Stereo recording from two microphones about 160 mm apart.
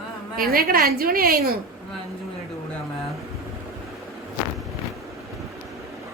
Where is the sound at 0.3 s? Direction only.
70° right (ahead or behind).